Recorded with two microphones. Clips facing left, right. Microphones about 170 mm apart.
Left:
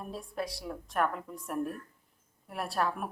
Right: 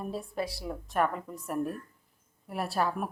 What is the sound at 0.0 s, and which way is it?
A woman's voice, centre (ahead or behind).